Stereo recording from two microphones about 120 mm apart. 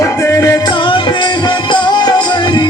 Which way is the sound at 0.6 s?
40° left (ahead or behind).